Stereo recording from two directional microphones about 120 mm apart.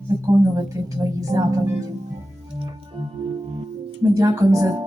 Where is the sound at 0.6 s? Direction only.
30° right (ahead or behind).